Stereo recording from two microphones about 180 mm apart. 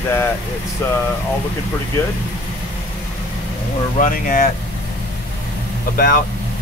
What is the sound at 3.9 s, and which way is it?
Speech, 50° left (ahead or behind).